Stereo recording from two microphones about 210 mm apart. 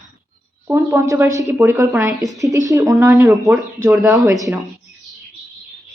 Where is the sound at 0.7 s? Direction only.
10° right (ahead or behind).